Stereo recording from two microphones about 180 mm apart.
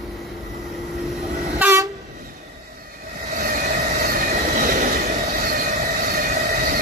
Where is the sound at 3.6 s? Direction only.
40° right (ahead or behind).